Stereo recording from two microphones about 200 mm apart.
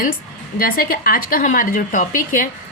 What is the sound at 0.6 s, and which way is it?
A woman's voice, 45° left (ahead or behind).